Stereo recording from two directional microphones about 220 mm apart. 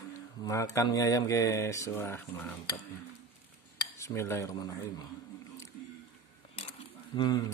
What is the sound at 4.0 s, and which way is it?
Speech, 10° left (ahead or behind).